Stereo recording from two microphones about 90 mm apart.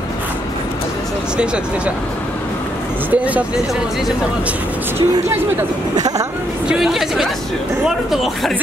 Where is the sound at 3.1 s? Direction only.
15° right (ahead or behind).